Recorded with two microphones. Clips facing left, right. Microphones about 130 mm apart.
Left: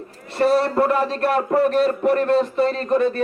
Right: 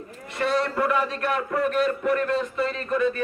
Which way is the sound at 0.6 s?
35° left (ahead or behind).